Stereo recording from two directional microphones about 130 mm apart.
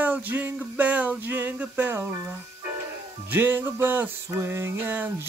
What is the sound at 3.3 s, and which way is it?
Music, 15° right (ahead or behind).